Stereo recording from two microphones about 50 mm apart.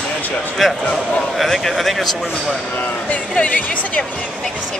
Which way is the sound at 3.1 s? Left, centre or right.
Left.